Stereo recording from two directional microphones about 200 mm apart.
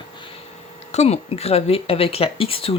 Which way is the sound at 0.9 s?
30° left (ahead or behind).